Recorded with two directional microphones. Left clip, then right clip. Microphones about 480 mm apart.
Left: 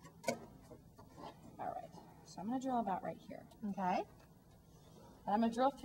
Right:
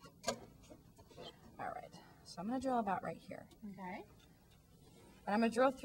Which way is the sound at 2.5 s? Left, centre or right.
Centre.